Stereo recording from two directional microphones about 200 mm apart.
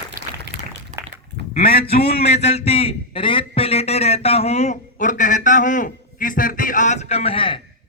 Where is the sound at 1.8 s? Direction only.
30° left (ahead or behind).